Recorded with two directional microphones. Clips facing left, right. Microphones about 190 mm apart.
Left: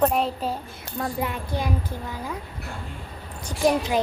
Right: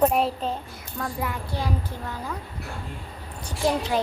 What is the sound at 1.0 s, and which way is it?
Speech, 25° left (ahead or behind).